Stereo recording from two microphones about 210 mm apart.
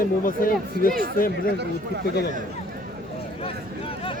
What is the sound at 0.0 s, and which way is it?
Speech, 40° left (ahead or behind).